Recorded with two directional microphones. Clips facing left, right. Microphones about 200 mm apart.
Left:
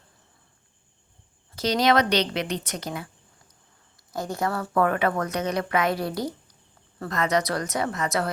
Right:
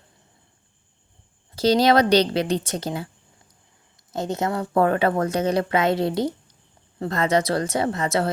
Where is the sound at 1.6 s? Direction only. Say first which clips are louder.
Right 4 dB; 30° right (ahead or behind).